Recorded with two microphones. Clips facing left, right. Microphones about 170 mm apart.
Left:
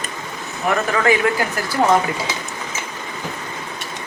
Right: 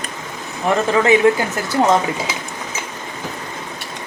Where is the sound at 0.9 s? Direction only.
25° right (ahead or behind).